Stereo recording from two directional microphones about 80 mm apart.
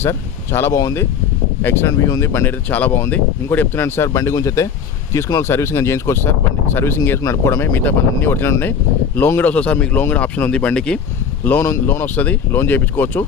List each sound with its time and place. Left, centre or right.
0.0 s speech: left
2.0 s speech: left
4.2 s speech: left
7.2 s speech: left; by 11.0 s centre
11.6 s speech: left